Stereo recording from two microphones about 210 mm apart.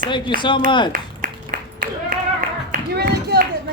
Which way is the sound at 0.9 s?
40° right (ahead or behind).